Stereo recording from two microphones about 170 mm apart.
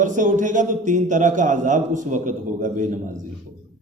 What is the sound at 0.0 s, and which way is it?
A man's voice, 50° right (ahead or behind).